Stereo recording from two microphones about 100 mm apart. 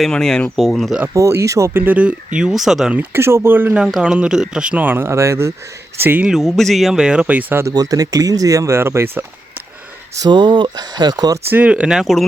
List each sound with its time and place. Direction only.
0.0 s speech: 5° left (ahead or behind)
1.1 s speech: 30° right (ahead or behind)
1.8 s speech: 15° right (ahead or behind)
3.8 s speech: 5° right (ahead or behind)
6.2 s speech: centre (ahead or behind)
7.7 s speech: 40° right (ahead or behind)
10.2 s speech: 45° right (ahead or behind)
11.5 s speech: 10° right (ahead or behind)